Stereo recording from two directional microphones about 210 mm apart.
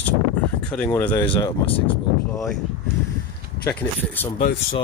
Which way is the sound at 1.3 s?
25° left (ahead or behind).